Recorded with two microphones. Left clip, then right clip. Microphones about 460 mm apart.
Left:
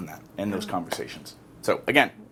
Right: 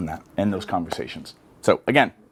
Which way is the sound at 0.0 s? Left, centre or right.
Right.